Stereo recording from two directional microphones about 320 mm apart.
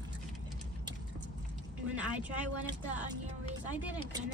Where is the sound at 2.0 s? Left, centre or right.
Centre.